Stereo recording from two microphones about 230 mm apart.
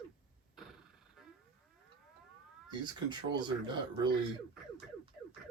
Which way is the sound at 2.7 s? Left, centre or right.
Centre.